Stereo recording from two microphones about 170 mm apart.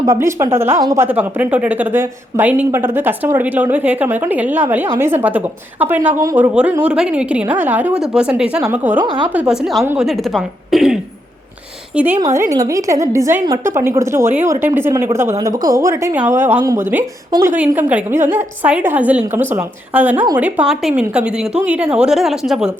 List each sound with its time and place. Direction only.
0.0 s a woman's voice: 20° right (ahead or behind)
10.1 s a woman's voice: centre (ahead or behind)